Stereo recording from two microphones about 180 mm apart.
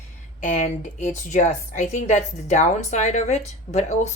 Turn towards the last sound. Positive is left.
turn(degrees=40)  # may be behind; listen again after turning